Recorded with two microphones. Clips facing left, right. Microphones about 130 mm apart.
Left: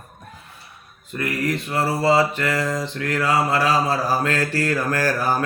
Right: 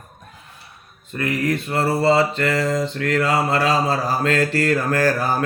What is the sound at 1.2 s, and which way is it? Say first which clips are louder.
Mantra: right 2 dB; 25° right (ahead or behind).